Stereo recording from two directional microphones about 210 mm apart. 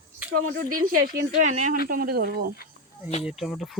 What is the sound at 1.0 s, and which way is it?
Speech, 45° right (ahead or behind).